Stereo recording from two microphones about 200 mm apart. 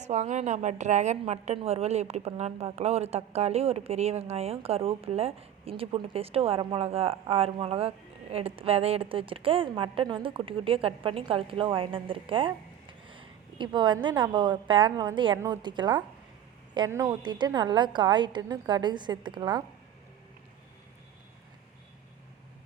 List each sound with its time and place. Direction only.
0.0 s a woman's voice: 35° right (ahead or behind)